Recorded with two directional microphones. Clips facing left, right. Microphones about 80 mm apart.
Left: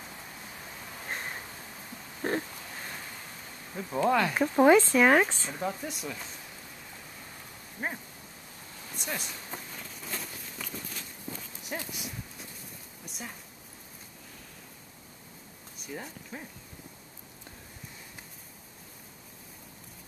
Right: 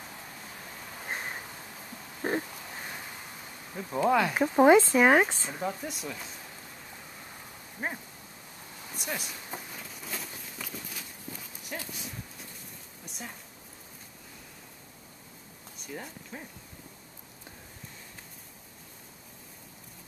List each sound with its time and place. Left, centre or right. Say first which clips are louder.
1.0 s a sound: right 1 dB; centre
2.2 s oink: even; centre
3.7 s speech: right 1 dB; centre
4.6 s speech: right 1 dB; centre
5.5 s speech: even; centre
7.8 s a sound: even; centre
8.9 s walk: even; centre
11.7 s dog: left 2 dB; centre
13.0 s a sound: even; centre
15.9 s speech: left 1 dB; centre